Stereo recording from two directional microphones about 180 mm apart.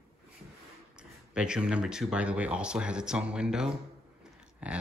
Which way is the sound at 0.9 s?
5° right (ahead or behind).